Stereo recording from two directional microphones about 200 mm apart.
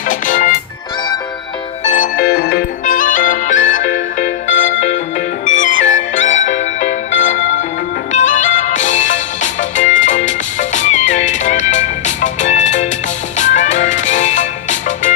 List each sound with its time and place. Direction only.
0.1 s music: 40° left (ahead or behind)
1.8 s music: 40° left (ahead or behind)